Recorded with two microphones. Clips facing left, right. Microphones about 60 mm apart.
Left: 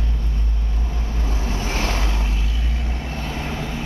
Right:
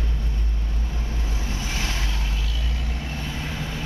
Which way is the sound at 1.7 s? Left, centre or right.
Left.